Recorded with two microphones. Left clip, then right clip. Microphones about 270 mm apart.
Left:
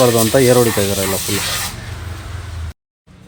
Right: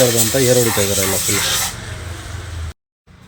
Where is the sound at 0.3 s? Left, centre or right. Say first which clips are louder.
Left 3 dB; centre.